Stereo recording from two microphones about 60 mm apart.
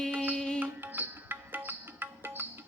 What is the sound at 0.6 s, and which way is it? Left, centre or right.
Music, right.